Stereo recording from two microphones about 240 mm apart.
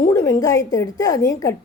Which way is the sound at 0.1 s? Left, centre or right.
Centre.